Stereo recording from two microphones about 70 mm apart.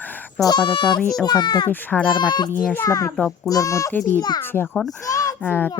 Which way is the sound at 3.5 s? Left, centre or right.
Left.